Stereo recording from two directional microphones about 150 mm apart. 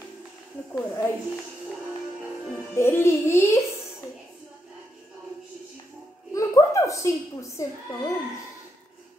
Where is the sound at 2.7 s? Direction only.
15° left (ahead or behind).